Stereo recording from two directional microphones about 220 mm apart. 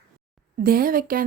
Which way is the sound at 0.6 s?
40° right (ahead or behind).